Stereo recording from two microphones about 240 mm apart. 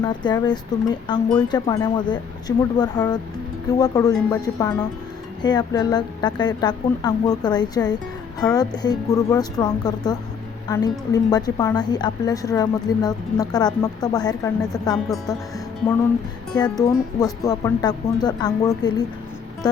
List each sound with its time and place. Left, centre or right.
0.0 s a woman's voice: centre
16.7 s a woman's voice: centre